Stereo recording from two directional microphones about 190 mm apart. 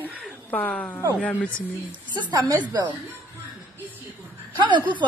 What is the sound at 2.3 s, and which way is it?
Speech, 20° right (ahead or behind).